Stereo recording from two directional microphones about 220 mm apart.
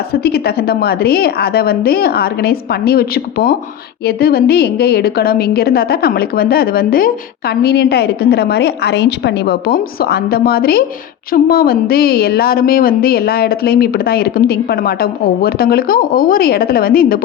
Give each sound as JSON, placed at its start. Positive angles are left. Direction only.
{"t": 0.1, "sound": "a woman's voice", "side_deg": 45}